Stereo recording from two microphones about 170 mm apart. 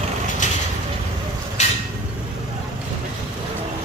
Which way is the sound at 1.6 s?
40° left (ahead or behind).